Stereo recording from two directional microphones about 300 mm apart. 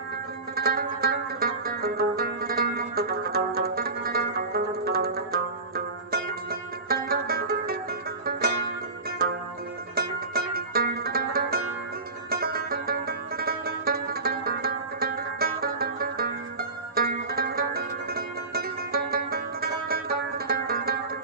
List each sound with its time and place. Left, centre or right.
0.5 s zither: right
8.2 s music: right
9.9 s music: right